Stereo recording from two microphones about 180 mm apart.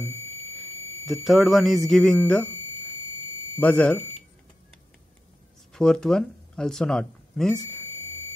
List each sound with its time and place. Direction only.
0.0 s music: 35° right (ahead or behind)
1.0 s speech: centre (ahead or behind)
3.5 s speech: 5° left (ahead or behind)
5.7 s speech: 5° left (ahead or behind)